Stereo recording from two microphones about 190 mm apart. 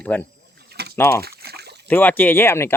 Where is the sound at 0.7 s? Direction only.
60° right (ahead or behind).